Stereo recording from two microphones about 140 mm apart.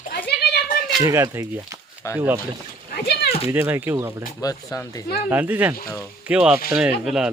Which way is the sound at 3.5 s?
15° right (ahead or behind).